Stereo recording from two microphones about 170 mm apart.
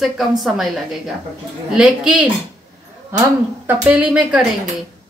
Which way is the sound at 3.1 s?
20° right (ahead or behind).